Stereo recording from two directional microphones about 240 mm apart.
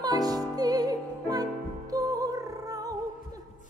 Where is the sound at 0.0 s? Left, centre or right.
Centre.